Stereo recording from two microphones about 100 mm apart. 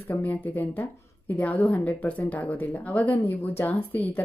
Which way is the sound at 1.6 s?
15° left (ahead or behind).